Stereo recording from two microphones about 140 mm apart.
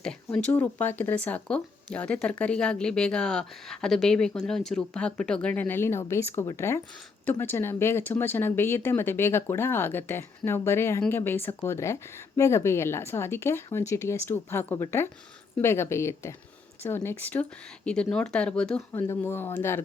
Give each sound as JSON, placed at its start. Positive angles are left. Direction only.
{"t": 0.0, "sound": "a woman's voice", "side_deg": 5}